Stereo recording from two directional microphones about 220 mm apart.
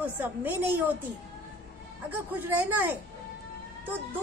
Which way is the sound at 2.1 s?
10° right (ahead or behind).